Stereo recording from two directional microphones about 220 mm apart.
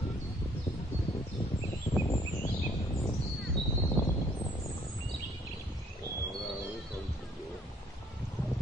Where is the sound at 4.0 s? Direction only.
10° left (ahead or behind).